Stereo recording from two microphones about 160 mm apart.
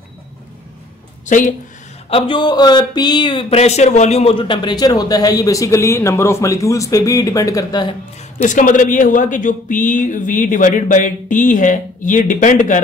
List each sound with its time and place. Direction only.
1.2 s a woman's voice: 50° left (ahead or behind)
2.0 s speech: 35° left (ahead or behind)
8.4 s speech: 50° left (ahead or behind)